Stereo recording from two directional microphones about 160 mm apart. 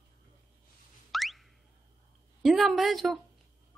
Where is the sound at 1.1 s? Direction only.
Centre (ahead or behind).